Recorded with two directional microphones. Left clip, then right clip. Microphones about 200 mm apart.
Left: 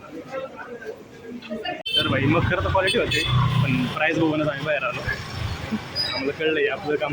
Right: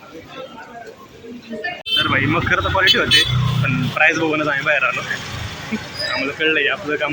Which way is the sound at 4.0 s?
Centre (ahead or behind).